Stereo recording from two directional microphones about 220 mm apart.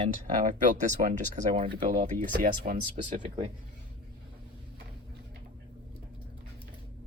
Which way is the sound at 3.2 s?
25° right (ahead or behind).